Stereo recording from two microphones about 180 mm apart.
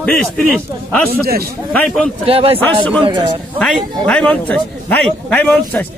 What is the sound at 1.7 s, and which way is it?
Speech, 5° left (ahead or behind).